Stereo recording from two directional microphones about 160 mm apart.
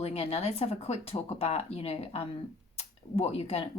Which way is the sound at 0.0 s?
40° left (ahead or behind).